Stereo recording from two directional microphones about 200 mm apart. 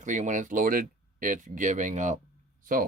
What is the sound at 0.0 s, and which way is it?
Speech, 40° right (ahead or behind).